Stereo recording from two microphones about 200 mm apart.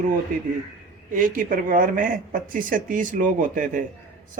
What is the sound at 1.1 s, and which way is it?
Speech, 45° right (ahead or behind).